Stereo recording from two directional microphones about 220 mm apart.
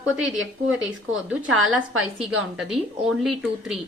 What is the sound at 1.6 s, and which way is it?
Speech, 65° right (ahead or behind).